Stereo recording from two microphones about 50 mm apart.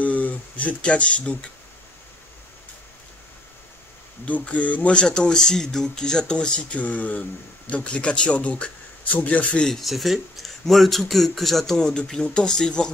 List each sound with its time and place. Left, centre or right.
0.0 s a sound: left
4.3 s speech: left
5.0 s speech: centre
9.7 s a man's voice: centre